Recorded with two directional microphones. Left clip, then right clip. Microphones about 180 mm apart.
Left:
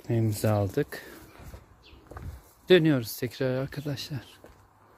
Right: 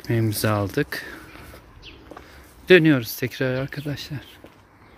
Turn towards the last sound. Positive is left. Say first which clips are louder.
# right 4 dB
turn(degrees=35)  # may be behind; listen again after turning